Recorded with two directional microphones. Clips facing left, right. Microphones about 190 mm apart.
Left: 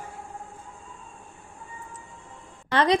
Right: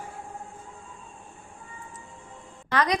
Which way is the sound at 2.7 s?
30° left (ahead or behind).